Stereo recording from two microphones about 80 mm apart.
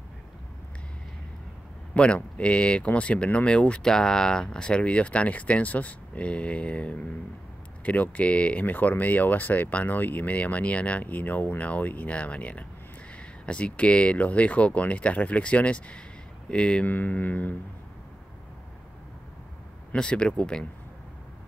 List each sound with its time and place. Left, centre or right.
2.0 s speech: centre
19.9 s speech: centre